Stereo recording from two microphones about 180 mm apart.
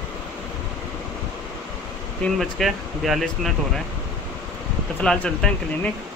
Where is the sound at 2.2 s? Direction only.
Centre (ahead or behind).